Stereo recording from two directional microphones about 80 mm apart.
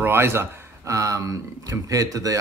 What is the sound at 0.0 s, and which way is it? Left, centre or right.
Speech, right.